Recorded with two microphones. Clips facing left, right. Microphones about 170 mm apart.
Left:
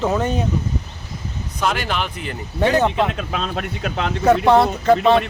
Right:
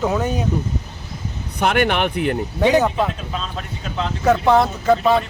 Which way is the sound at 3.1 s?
70° left (ahead or behind).